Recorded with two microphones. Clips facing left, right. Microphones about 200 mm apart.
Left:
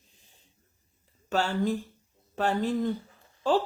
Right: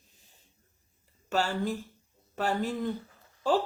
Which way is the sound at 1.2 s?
10° right (ahead or behind).